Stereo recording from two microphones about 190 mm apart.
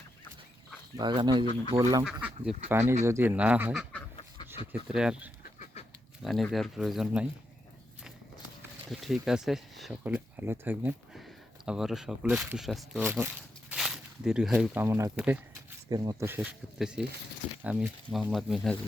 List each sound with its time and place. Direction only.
0.9 s speech: 25° right (ahead or behind)
2.2 s speech: 5° right (ahead or behind)
4.4 s a sound: 30° left (ahead or behind)
4.9 s speech: 5° right (ahead or behind)
8.9 s speech: centre (ahead or behind)